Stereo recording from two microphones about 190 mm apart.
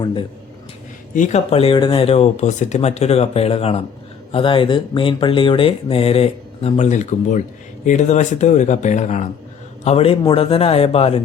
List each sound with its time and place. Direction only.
0.0 s speech: 25° left (ahead or behind)
1.1 s speech: 40° left (ahead or behind)